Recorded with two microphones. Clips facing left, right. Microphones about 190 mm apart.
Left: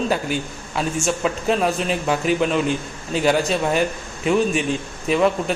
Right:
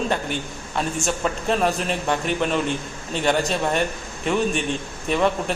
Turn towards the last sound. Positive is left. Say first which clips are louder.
# left 3 dB
turn(degrees=0)  # may be behind; listen again after turning